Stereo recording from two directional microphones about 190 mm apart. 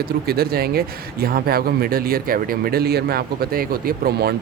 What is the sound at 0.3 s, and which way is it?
Speech, 55° right (ahead or behind).